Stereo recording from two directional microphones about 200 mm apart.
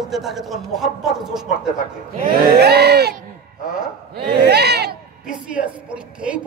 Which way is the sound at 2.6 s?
55° right (ahead or behind).